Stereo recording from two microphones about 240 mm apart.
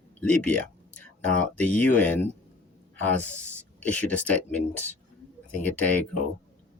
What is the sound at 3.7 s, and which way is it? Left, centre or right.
Speech, centre.